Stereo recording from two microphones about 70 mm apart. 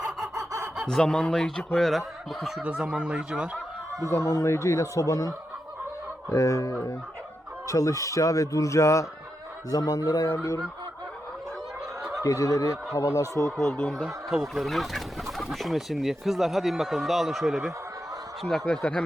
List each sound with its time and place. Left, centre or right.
0.3 s a sound: right
0.9 s speech: centre
2.6 s speech: centre
4.1 s speech: left
6.3 s speech: left
9.6 s speech: left
10.2 s fowl: left
12.2 s speech: left
13.8 s speech: centre
18.7 s speech: centre